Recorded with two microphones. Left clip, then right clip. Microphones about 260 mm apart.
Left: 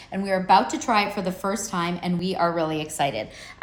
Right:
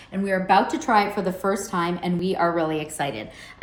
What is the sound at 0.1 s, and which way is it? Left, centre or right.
Speech, left.